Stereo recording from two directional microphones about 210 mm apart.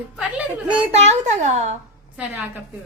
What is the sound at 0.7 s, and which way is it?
A woman's voice, 30° right (ahead or behind).